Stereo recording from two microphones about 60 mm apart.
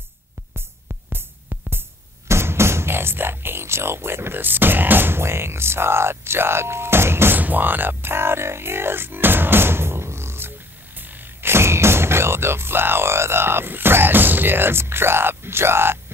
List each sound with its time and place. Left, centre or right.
0.6 s music: right
7.3 s speech: right
11.0 s speech: right